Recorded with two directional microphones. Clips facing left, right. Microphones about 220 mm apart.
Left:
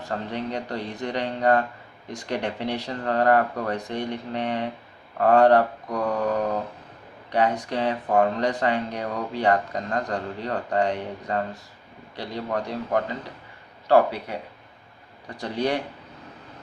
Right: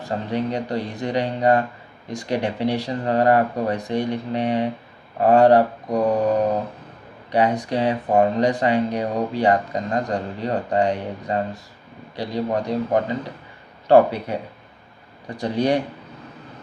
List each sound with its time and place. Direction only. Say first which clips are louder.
0.0 s speech: right 5 dB; 10° right (ahead or behind)
5.9 s mantra: right 8 dB; 35° right (ahead or behind)
7.3 s a man's voice: right 3 dB; 15° right (ahead or behind)
15.4 s speech: right 5 dB; 15° right (ahead or behind)